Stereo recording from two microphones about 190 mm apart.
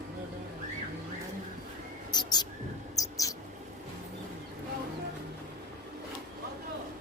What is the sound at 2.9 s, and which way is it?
Mouse, 20° left (ahead or behind).